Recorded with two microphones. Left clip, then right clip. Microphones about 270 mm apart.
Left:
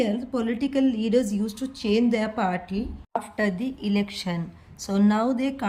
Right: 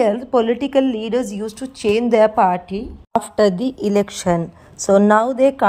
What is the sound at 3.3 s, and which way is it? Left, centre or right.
Speech, centre.